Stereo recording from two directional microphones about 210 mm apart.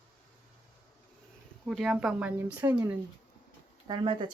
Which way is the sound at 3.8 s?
20° right (ahead or behind).